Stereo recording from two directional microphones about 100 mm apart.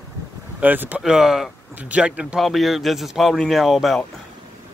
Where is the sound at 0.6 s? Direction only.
15° right (ahead or behind).